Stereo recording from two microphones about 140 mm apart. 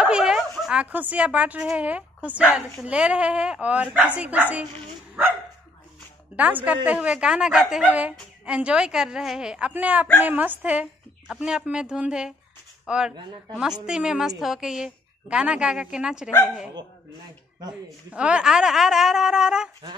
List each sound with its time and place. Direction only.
0.0 s a woman's voice: 5° right (ahead or behind)
6.3 s a woman's voice: 10° right (ahead or behind)
17.6 s speech: 30° right (ahead or behind)
18.1 s a woman's voice: 10° right (ahead or behind)